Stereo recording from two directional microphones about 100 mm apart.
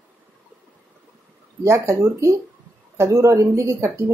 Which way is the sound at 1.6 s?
30° right (ahead or behind).